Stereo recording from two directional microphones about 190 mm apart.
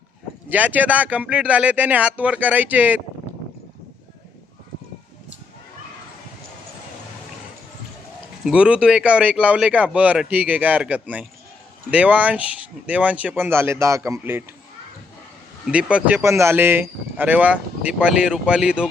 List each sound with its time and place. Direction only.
0.5 s speech: 10° right (ahead or behind)
8.4 s speech: 5° right (ahead or behind)
15.7 s speech: 5° right (ahead or behind)